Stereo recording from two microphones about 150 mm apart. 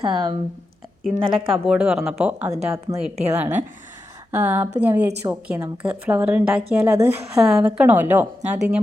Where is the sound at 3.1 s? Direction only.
45° right (ahead or behind).